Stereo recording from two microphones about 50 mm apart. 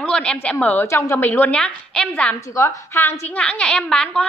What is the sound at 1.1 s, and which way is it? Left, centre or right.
Speech, left.